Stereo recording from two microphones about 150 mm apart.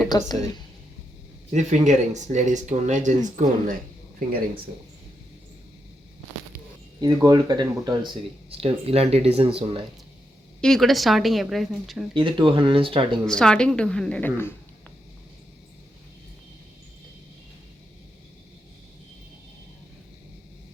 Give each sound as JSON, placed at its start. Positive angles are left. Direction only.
{"t": 0.1, "sound": "a woman's voice", "side_deg": 25}
{"t": 1.5, "sound": "speech", "side_deg": -55}
{"t": 7.0, "sound": "speech", "side_deg": -25}
{"t": 10.6, "sound": "a woman's voice", "side_deg": 0}
{"t": 12.1, "sound": "speech", "side_deg": -35}
{"t": 13.2, "sound": "a woman's voice", "side_deg": 5}